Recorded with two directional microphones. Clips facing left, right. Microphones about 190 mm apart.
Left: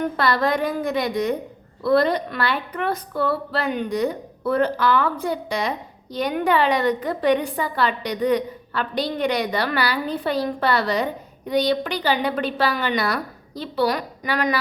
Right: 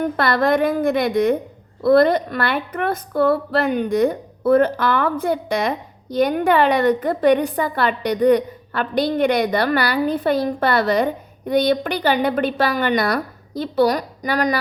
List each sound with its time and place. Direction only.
0.2 s a woman's voice: 55° right (ahead or behind)